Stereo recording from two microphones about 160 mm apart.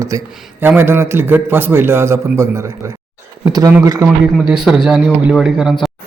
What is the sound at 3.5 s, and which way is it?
Speech, 25° right (ahead or behind).